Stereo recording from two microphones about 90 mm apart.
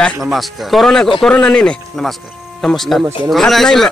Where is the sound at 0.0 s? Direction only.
Centre (ahead or behind).